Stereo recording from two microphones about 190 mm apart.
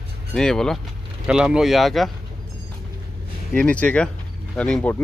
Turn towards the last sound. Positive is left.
turn(degrees=5)  # may be behind; listen again after turning